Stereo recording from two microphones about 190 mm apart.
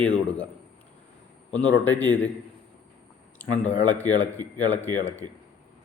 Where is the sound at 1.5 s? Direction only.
10° left (ahead or behind).